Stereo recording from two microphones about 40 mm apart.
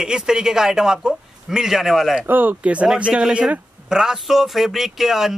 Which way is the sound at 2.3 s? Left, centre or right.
Right.